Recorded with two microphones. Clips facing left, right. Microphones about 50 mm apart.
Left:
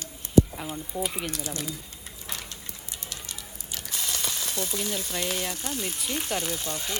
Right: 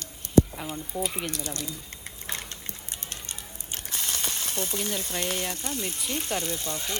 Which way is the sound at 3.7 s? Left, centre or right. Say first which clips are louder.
Even; right.